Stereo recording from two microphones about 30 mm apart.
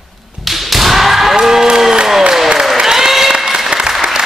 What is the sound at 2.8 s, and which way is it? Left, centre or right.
Applause, centre.